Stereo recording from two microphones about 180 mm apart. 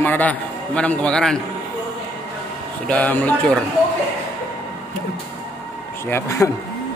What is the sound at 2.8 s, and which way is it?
Speech, 10° left (ahead or behind).